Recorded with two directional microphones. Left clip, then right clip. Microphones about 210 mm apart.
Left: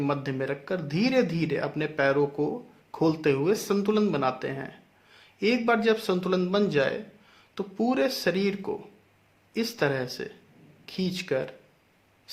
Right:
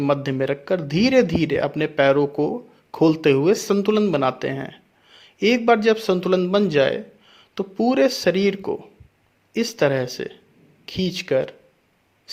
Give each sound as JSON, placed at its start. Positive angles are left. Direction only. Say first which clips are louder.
{"t": 0.0, "sound": "speech", "louder": "right 8 dB", "side_deg": -35}